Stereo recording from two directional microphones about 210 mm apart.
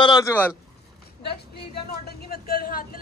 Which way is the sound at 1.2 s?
50° left (ahead or behind).